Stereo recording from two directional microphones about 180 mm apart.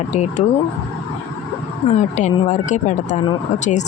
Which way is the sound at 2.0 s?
40° left (ahead or behind).